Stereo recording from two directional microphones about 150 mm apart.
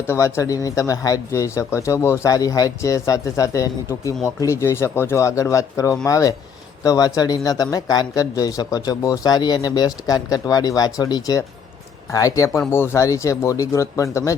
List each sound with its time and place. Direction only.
0.1 s speech: 20° left (ahead or behind)